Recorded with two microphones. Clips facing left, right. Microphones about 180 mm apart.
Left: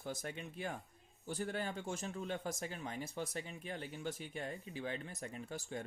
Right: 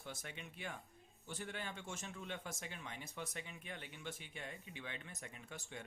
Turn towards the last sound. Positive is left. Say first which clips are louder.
# left 8 dB
turn(degrees=35)  # may be behind; listen again after turning